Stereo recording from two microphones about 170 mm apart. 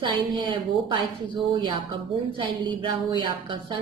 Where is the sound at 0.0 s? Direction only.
30° right (ahead or behind).